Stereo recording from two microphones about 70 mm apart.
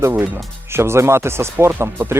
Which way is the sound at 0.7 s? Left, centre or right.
Right.